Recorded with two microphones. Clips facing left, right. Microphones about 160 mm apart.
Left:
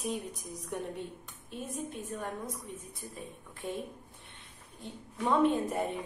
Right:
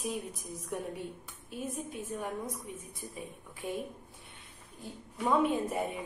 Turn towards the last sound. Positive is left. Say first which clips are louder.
# left 1 dB
turn(degrees=-10)  # may be behind; listen again after turning